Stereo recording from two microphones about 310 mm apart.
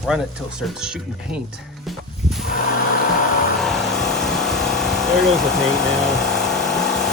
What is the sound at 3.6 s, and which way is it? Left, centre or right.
Vehicle, centre.